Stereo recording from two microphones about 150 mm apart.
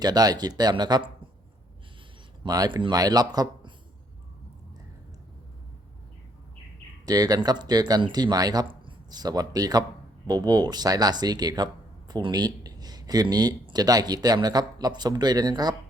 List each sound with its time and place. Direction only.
0.0 s speech: 25° right (ahead or behind)
2.4 s speech: 25° right (ahead or behind)
7.0 s speech: 25° right (ahead or behind)